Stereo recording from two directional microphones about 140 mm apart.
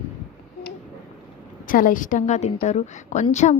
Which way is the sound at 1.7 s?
75° left (ahead or behind).